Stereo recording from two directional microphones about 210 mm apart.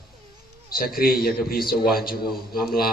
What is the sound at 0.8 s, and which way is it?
A man's voice, 45° left (ahead or behind).